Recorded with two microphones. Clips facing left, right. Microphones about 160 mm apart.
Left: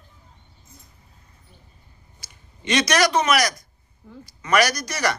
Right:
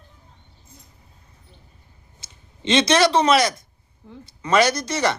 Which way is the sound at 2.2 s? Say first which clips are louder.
Right 5 dB; 25° right (ahead or behind).